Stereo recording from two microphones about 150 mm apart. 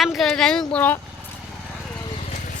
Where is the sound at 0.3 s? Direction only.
5° left (ahead or behind).